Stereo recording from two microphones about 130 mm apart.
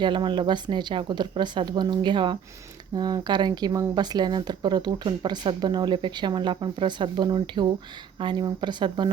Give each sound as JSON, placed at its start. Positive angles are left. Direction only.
{"t": 0.0, "sound": "speech", "side_deg": -35}